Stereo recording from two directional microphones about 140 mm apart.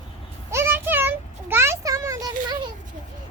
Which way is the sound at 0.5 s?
15° right (ahead or behind).